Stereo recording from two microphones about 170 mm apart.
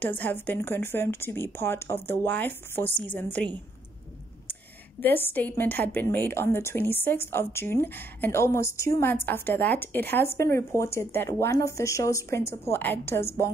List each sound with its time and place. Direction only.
0.0 s a woman's voice: 10° left (ahead or behind)
5.0 s a woman's voice: 10° left (ahead or behind)